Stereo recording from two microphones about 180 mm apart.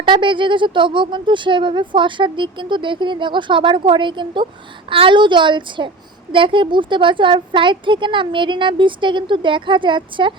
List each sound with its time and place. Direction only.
0.0 s speech: 25° right (ahead or behind)